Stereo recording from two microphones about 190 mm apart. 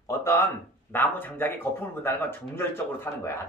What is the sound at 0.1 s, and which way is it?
Speech, 15° left (ahead or behind).